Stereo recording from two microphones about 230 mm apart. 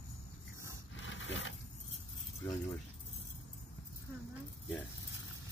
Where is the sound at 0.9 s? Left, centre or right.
Left.